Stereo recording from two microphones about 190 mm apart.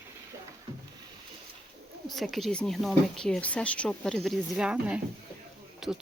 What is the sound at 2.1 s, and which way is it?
Speech, centre (ahead or behind).